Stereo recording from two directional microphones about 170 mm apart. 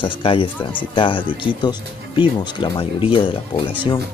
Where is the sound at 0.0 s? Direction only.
30° left (ahead or behind).